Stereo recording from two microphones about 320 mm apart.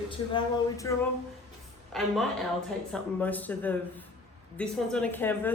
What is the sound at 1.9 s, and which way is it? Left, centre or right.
A woman's voice, centre.